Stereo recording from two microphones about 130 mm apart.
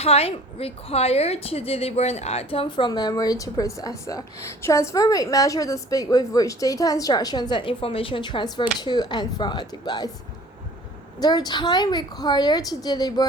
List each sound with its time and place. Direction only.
0.0 s a woman's voice: 50° left (ahead or behind); by 10.1 s 35° left (ahead or behind)
11.2 s a woman's voice: 30° left (ahead or behind)